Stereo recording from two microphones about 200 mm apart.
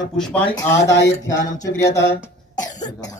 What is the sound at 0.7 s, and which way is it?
Speech, 60° left (ahead or behind).